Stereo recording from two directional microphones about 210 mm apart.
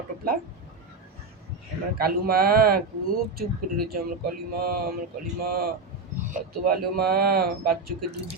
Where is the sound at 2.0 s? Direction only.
45° right (ahead or behind).